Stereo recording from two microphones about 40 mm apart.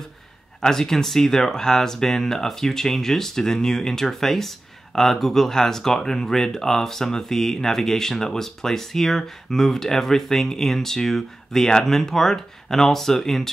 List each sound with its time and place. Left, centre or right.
0.6 s speech: centre